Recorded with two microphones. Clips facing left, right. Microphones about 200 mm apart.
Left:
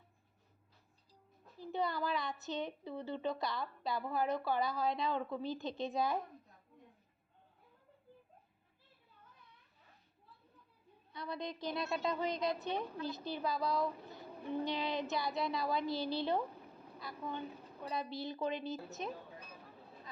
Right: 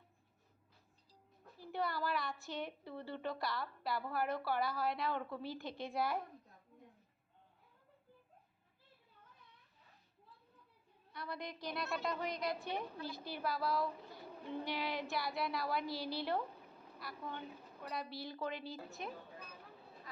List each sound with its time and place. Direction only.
1.7 s a woman's voice: 20° left (ahead or behind)
11.1 s a woman's voice: 20° left (ahead or behind)